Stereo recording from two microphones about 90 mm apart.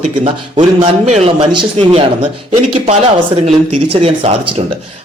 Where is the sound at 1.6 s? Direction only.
85° right.